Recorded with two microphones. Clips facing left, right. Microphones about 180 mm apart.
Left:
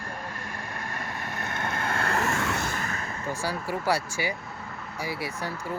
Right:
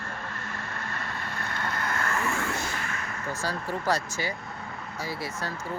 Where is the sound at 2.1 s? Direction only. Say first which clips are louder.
Left 2 dB; 75° left (ahead or behind); by 3.0 s 40° left (ahead or behind).